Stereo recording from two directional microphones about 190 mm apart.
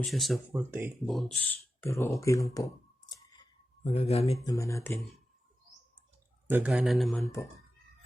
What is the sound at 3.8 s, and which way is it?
Speech, 30° left (ahead or behind).